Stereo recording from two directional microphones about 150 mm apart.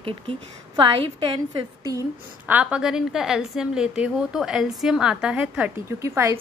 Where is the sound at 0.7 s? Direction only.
35° right (ahead or behind).